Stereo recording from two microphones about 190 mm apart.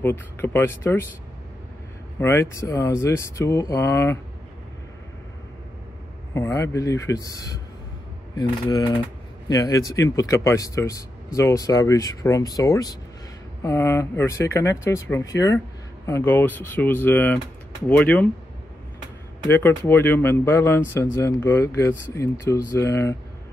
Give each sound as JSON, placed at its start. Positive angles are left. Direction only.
{"t": 0.0, "sound": "speech", "side_deg": 10}
{"t": 2.1, "sound": "speech", "side_deg": 15}
{"t": 6.3, "sound": "speech", "side_deg": 15}
{"t": 19.4, "sound": "speech", "side_deg": 10}